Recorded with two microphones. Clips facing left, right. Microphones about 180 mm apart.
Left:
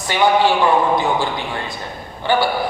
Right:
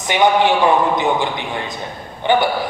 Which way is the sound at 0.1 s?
20° right (ahead or behind).